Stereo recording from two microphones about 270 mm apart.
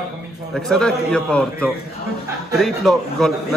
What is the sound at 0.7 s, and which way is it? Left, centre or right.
A man's voice, centre.